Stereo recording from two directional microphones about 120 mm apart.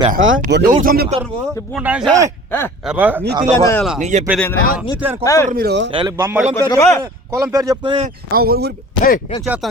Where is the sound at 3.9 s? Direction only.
80° right.